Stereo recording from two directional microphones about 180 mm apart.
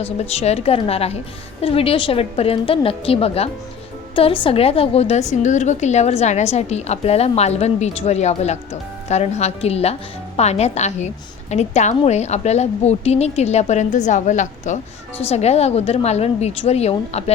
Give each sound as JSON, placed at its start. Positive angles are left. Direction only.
{"t": 0.0, "sound": "a woman's voice", "side_deg": 35}